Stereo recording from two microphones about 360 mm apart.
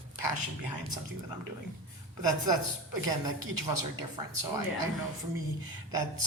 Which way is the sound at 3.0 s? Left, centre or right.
Right.